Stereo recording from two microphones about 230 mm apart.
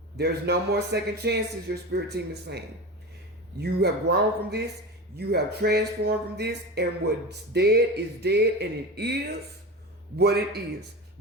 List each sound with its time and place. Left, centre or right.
0.2 s speech: right